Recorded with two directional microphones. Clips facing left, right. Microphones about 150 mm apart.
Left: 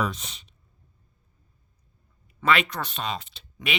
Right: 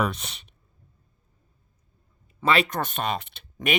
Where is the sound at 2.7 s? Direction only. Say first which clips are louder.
Right 4 dB; 50° right (ahead or behind).